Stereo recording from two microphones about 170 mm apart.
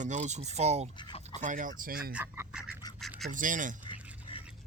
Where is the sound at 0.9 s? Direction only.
25° left (ahead or behind).